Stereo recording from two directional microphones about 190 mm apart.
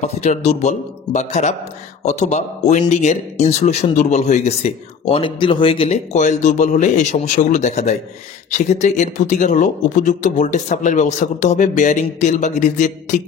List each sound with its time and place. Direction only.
0.0 s speech: 35° left (ahead or behind)